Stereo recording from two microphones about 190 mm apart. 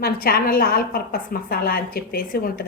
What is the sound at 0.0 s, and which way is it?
A woman's voice, 55° left (ahead or behind).